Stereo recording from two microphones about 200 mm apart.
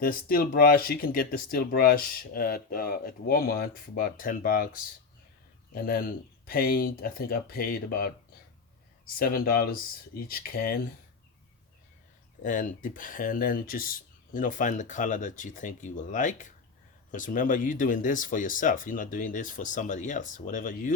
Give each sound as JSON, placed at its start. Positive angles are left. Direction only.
{"t": 0.0, "sound": "speech", "side_deg": 45}
{"t": 9.1, "sound": "speech", "side_deg": 50}
{"t": 12.4, "sound": "speech", "side_deg": 40}